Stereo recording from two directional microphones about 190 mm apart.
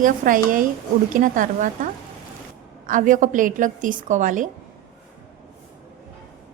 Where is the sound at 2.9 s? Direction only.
45° right (ahead or behind).